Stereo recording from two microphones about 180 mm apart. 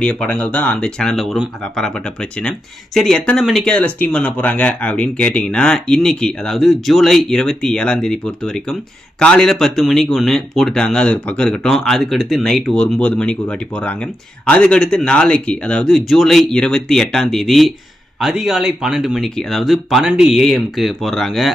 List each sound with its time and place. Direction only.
0.0 s speech: 5° left (ahead or behind)
9.2 s speech: 5° left (ahead or behind)